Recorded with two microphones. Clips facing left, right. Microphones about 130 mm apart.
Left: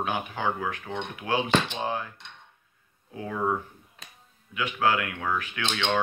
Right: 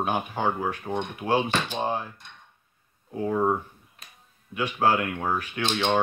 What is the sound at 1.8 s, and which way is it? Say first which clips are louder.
Speech: right 2 dB; 25° right (ahead or behind).